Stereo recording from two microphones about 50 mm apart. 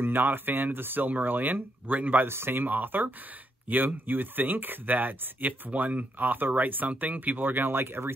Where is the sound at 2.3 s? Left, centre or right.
Right.